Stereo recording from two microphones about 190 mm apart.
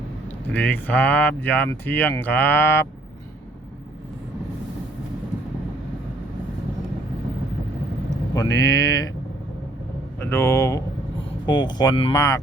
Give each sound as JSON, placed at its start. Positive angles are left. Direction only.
{"t": 0.5, "sound": "speech", "side_deg": 10}
{"t": 8.4, "sound": "speech", "side_deg": 20}
{"t": 10.2, "sound": "speech", "side_deg": 15}